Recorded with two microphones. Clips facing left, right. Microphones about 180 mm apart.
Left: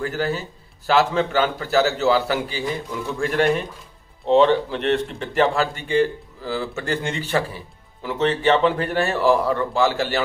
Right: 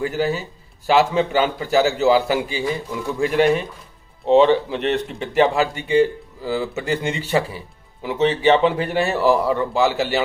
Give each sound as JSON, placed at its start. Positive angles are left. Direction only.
{"t": 0.0, "sound": "a man's voice", "side_deg": -10}